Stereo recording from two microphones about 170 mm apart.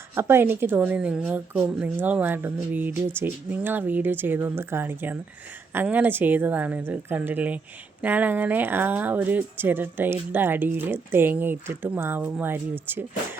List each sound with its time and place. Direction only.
0.1 s a woman's voice: 15° right (ahead or behind)